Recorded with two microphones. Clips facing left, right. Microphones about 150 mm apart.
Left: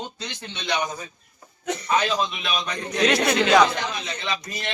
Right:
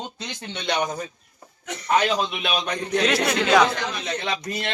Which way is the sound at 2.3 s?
65° right (ahead or behind).